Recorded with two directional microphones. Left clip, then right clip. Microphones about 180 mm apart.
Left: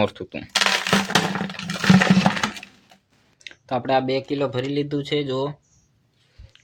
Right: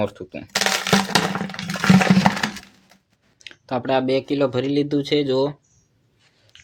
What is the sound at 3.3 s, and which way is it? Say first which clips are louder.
Speech: even; 10° right (ahead or behind).